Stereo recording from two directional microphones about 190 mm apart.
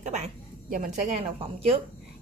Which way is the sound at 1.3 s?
30° right (ahead or behind).